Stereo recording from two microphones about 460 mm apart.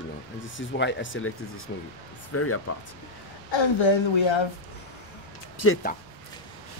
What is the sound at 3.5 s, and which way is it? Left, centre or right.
Speech, left.